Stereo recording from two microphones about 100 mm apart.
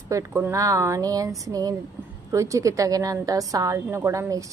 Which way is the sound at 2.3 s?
30° right (ahead or behind).